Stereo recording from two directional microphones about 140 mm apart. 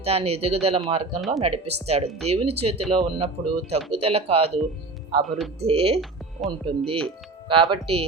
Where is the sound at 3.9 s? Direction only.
45° right (ahead or behind).